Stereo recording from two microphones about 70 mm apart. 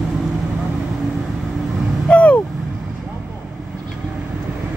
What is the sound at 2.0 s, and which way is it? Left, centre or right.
Vehicle, centre.